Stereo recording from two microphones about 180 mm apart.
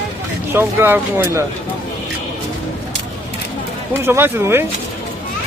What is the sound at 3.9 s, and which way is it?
Speech, 10° right (ahead or behind).